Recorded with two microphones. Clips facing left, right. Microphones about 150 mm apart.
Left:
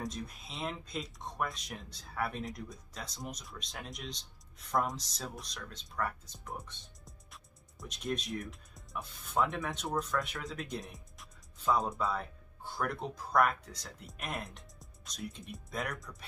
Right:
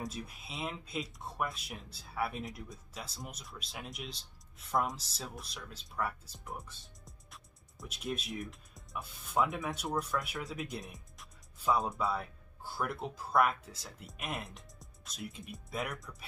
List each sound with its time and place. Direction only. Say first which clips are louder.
0.0 s speech: left 1 dB; 5° right (ahead or behind)